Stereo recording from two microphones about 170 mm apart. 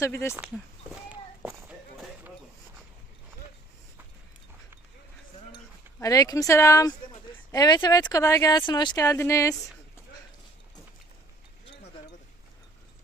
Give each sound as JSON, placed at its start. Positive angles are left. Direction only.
{"t": 0.0, "sound": "speech", "side_deg": 15}
{"t": 0.3, "sound": "speech", "side_deg": -5}
{"t": 1.1, "sound": "walk", "side_deg": -10}
{"t": 6.0, "sound": "speech", "side_deg": 20}